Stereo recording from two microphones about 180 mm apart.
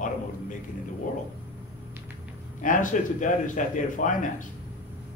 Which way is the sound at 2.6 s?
45° left (ahead or behind).